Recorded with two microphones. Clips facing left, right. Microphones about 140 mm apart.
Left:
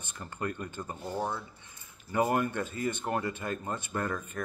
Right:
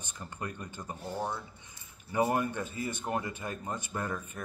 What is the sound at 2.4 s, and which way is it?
Speech, 15° right (ahead or behind).